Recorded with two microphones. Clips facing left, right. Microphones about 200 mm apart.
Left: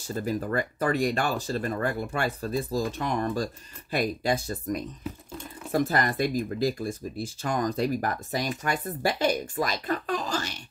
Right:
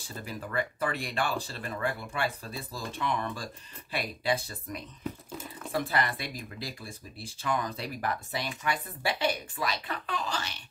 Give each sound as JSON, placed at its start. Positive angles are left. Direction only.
{"t": 0.0, "sound": "speech", "side_deg": 45}
{"t": 5.0, "sound": "whispering", "side_deg": 0}
{"t": 5.7, "sound": "speech", "side_deg": 45}